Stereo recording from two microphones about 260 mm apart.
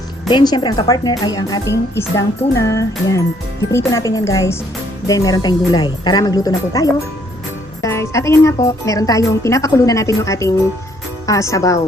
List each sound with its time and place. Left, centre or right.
0.3 s a woman's voice: centre